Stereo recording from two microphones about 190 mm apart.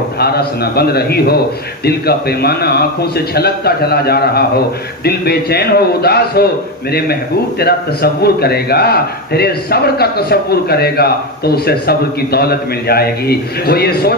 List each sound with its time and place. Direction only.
0.2 s a man's voice: 55° left (ahead or behind)